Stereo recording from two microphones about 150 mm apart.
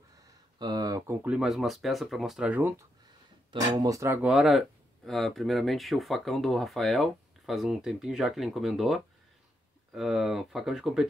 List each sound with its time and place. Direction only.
0.6 s speech: 25° right (ahead or behind)
1.2 s speech: 5° right (ahead or behind)
3.5 s speech: 25° right (ahead or behind)
4.3 s speech: centre (ahead or behind)